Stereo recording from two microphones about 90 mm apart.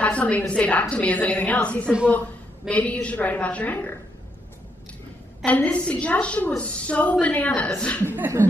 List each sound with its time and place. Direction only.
0.0 s a woman's voice: 15° left (ahead or behind)
5.4 s a woman's voice: 15° left (ahead or behind)
8.0 s speech: 25° right (ahead or behind)